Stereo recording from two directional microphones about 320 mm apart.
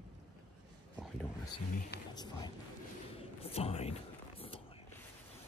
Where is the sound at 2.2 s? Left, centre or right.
Centre.